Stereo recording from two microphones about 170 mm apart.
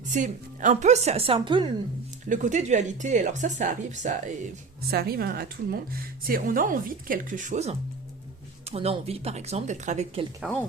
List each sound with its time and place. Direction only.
0.1 s speech: 50° right (ahead or behind); by 1.7 s 30° right (ahead or behind)
2.3 s speech: 45° right (ahead or behind)
4.9 s a woman's voice: 65° right (ahead or behind); by 10.2 s 40° right (ahead or behind)
10.4 s speech: 5° right (ahead or behind)